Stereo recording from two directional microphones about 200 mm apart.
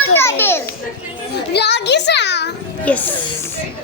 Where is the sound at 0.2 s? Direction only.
10° left (ahead or behind).